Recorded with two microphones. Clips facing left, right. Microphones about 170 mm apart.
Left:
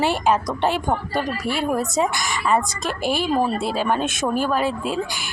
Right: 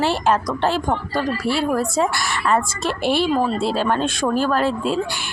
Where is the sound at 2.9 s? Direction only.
45° left (ahead or behind).